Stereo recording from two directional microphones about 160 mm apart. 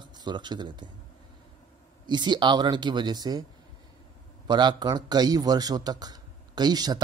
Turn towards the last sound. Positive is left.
turn(degrees=-25)  # may be behind; listen again after turning